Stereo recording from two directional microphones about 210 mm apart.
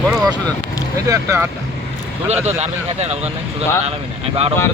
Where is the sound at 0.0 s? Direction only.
Centre (ahead or behind).